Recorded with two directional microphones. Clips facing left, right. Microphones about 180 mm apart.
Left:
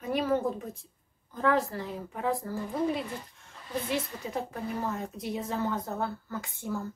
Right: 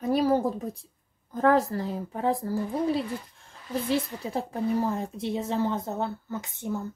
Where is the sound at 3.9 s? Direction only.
35° right (ahead or behind).